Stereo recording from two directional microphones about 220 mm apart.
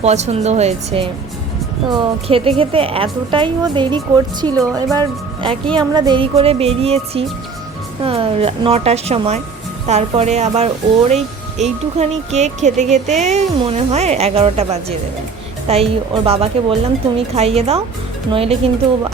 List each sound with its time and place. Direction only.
0.0 s speech: 30° right (ahead or behind)